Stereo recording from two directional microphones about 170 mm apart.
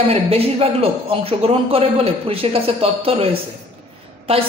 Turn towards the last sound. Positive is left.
turn(degrees=-35)  # may be behind; listen again after turning